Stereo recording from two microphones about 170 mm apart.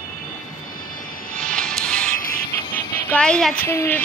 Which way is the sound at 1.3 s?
5° left (ahead or behind).